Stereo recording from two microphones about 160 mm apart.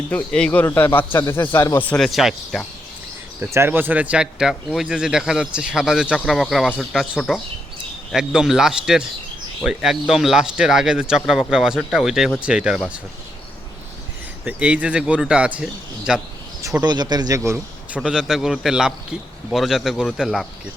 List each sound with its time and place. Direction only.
0.1 s a man's voice: 5° left (ahead or behind)
3.4 s speech: 15° right (ahead or behind)
14.4 s speech: 10° right (ahead or behind)
16.8 s a man's voice: 25° right (ahead or behind)
18.0 s speech: 5° right (ahead or behind)